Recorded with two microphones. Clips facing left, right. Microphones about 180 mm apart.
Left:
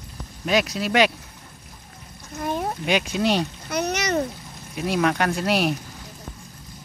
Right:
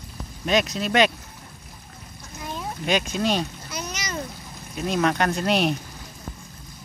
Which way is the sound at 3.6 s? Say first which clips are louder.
Left 9 dB; 60° left (ahead or behind).